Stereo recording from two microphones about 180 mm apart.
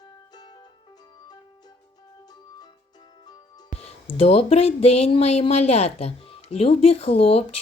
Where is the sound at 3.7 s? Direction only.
35° left (ahead or behind).